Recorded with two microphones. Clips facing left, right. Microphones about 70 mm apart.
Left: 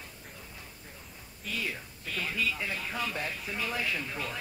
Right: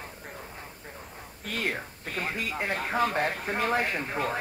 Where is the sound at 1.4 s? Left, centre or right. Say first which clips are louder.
Right 5 dB; right.